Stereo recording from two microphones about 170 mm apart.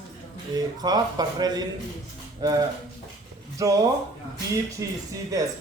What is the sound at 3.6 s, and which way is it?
A man's voice, 20° right (ahead or behind).